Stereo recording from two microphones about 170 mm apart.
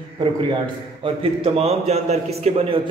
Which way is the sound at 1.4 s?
35° right (ahead or behind).